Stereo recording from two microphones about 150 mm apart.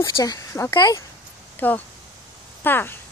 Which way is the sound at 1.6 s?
10° left (ahead or behind).